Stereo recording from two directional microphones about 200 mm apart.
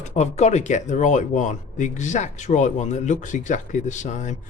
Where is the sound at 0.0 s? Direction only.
35° left (ahead or behind).